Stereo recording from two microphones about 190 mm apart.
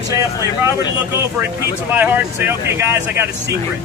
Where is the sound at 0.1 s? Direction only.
15° right (ahead or behind).